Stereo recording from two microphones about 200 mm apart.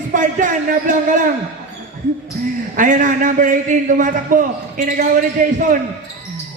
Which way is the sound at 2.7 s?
40° right (ahead or behind).